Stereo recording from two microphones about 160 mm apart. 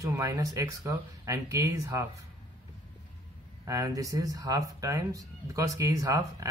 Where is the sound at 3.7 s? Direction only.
20° right (ahead or behind).